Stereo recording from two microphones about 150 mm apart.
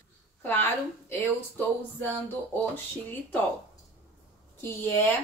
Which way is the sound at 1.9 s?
15° left (ahead or behind).